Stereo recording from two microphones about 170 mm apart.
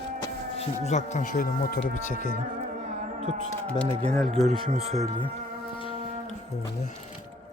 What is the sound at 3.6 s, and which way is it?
Music, 5° left (ahead or behind).